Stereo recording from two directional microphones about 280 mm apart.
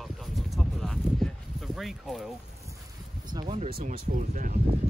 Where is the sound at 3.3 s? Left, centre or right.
Centre.